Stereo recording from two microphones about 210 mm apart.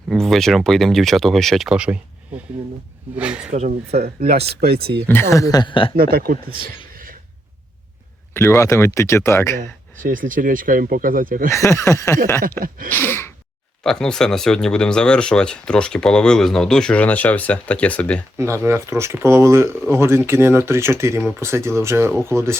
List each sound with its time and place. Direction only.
0.1 s speech: centre (ahead or behind)
3.2 s speech: 5° right (ahead or behind)
3.5 s speech: 35° right (ahead or behind)
4.4 s speech: 50° right (ahead or behind)
4.9 s speech: 10° left (ahead or behind)
6.0 s speech: 45° right (ahead or behind)
6.9 s cough: 40° right (ahead or behind)
8.3 s speech: 10° left (ahead or behind)
10.0 s speech: 40° right (ahead or behind)
11.5 s speech: 15° left (ahead or behind)
12.4 s speech: 40° right (ahead or behind)
13.0 s gasp: 10° left (ahead or behind)
13.8 s speech: 5° left (ahead or behind)
18.3 s speech: 15° right (ahead or behind)